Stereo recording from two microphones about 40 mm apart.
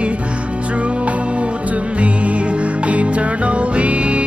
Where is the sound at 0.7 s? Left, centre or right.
Right.